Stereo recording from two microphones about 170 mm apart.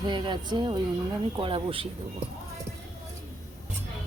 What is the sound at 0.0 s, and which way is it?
Speech, 25° right (ahead or behind).